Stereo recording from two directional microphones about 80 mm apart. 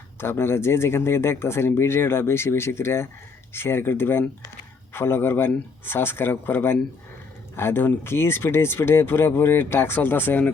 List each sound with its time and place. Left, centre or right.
0.2 s speech: left